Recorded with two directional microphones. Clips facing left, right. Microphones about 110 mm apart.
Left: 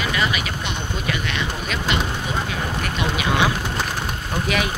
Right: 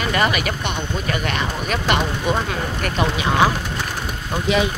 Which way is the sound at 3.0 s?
35° right (ahead or behind).